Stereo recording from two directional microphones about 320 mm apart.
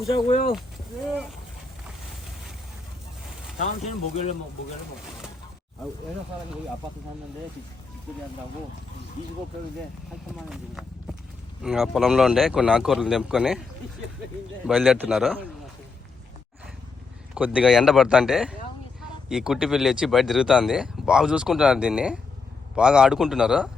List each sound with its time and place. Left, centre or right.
0.1 s speech: centre
3.6 s speech: centre
10.5 s speech: centre
14.7 s speech: centre
17.3 s speech: centre